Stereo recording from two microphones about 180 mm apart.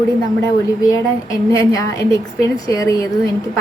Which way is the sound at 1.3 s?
20° left (ahead or behind).